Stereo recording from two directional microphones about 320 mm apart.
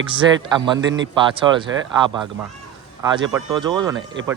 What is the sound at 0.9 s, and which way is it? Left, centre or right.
Speech, right.